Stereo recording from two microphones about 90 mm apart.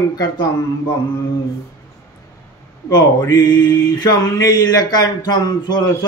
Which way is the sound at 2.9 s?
50° left (ahead or behind).